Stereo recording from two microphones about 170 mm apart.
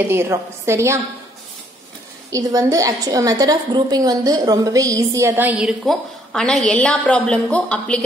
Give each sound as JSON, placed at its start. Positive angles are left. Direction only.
{"t": 0.1, "sound": "a woman's voice", "side_deg": -15}
{"t": 2.3, "sound": "a woman's voice", "side_deg": -20}